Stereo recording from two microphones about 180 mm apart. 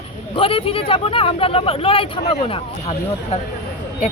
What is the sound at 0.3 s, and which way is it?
Speech, 30° left (ahead or behind).